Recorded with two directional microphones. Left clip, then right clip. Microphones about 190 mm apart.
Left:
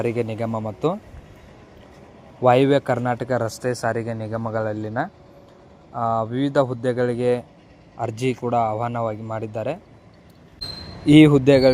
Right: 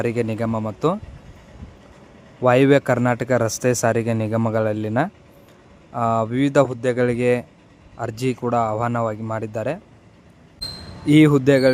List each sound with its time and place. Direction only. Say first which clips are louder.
0.0 s speech: right 1 dB; 20° right (ahead or behind)
2.4 s speech: right 1 dB; 20° right (ahead or behind)
3.6 s speech: right 4 dB; 40° right (ahead or behind); by 9.8 s 20° right (ahead or behind)
11.0 s speech: left 2 dB; 5° right (ahead or behind)